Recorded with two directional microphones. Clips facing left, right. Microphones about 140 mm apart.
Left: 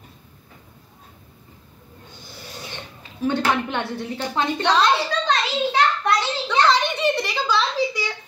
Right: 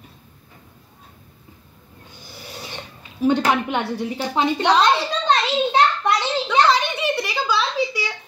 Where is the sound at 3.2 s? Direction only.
15° right (ahead or behind).